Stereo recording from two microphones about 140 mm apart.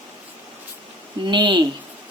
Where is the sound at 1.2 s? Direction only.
35° right (ahead or behind).